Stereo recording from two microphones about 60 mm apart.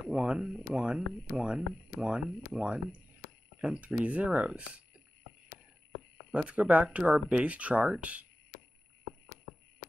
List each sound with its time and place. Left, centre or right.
0.1 s speech: centre
6.3 s speech: right